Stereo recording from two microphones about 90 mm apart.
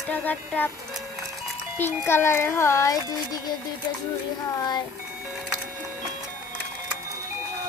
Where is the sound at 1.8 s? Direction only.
25° left (ahead or behind).